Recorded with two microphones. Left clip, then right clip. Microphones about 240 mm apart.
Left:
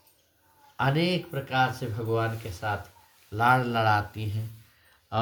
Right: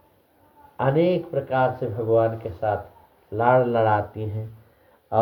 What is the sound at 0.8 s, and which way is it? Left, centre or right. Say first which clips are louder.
Speech: right 6 dB; left.